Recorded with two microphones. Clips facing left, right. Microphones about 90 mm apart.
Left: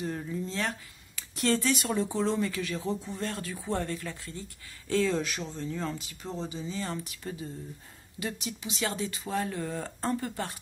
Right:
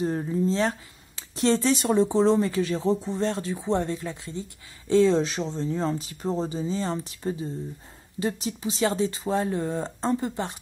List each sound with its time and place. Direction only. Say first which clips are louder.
0.0 s speech: right 8 dB; 35° right (ahead or behind)